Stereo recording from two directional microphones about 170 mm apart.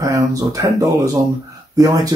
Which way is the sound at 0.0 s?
20° right (ahead or behind).